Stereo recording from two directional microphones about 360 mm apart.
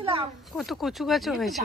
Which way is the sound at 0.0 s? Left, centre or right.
Centre.